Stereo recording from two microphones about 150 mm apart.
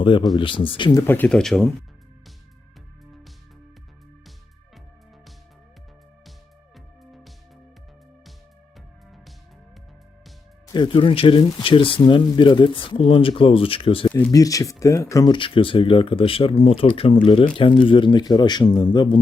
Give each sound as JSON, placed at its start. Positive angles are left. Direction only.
{"t": 0.0, "sound": "speech", "side_deg": 35}
{"t": 1.0, "sound": "speech", "side_deg": 10}
{"t": 6.7, "sound": "music", "side_deg": 0}
{"t": 10.7, "sound": "speech", "side_deg": 30}
{"t": 14.1, "sound": "speech", "side_deg": 10}
{"t": 14.3, "sound": "speech", "side_deg": 25}